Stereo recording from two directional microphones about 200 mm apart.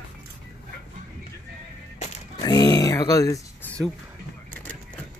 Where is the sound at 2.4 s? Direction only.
20° left (ahead or behind).